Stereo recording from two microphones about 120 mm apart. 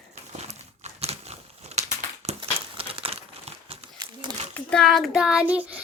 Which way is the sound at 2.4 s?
50° right (ahead or behind).